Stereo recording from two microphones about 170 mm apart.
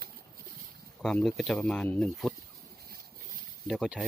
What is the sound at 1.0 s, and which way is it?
Speech, 5° left (ahead or behind).